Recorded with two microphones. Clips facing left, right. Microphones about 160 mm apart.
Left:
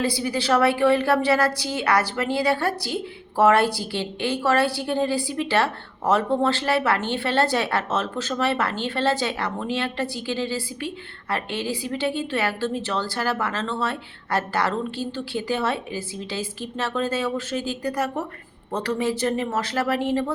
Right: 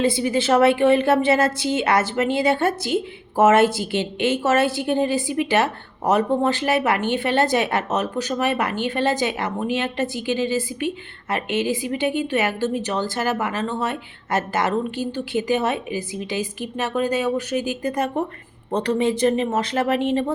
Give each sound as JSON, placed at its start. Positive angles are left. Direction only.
{"t": 0.0, "sound": "a woman's voice", "side_deg": -20}